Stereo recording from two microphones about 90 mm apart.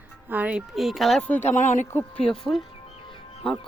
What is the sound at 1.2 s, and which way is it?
Speech, 20° left (ahead or behind).